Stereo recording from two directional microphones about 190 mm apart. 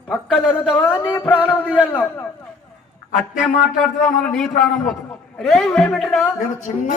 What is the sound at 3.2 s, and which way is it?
A man's voice, centre (ahead or behind).